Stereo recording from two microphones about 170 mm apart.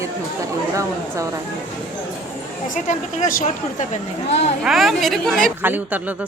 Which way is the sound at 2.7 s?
50° left (ahead or behind).